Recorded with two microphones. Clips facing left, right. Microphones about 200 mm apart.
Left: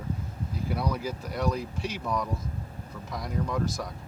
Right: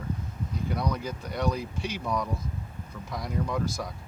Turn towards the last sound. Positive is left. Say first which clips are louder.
# even
turn(degrees=0)  # may be behind; listen again after turning